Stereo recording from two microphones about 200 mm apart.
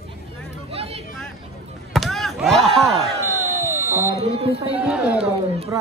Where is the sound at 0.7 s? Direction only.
30° right (ahead or behind).